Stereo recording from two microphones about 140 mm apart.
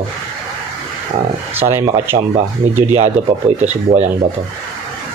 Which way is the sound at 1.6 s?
15° right (ahead or behind).